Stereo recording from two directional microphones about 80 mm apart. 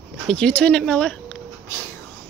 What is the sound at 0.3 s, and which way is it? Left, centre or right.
Speech, centre.